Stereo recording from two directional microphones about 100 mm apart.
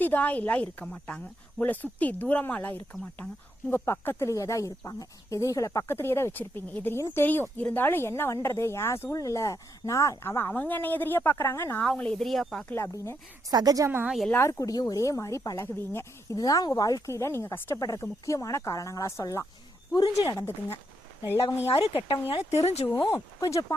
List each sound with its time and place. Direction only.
0.0 s speech: 15° left (ahead or behind)
11.9 s speech: 10° left (ahead or behind)
12.6 s speech: 25° left (ahead or behind)
13.5 s a woman's voice: 40° right (ahead or behind)
14.3 s speech: 30° left (ahead or behind)
16.4 s speech: 35° left (ahead or behind)
17.7 s speech: 35° left (ahead or behind)
20.4 s speech: 25° left (ahead or behind)
21.7 s speech: 70° left (ahead or behind)
22.3 s speech: 90° left
23.0 s speech: 30° left (ahead or behind)